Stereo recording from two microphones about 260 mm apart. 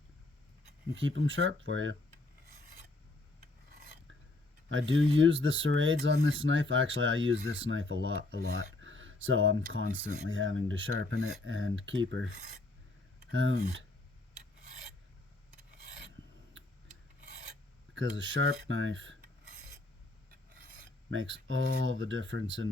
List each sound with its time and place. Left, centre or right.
1.0 s speech: right
4.7 s speech: right
8.8 s a sound: right
9.2 s speech: right
13.3 s speech: right
17.9 s speech: right
21.1 s speech: right